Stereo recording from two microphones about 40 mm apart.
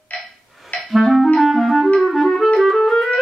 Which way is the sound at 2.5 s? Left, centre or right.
Centre.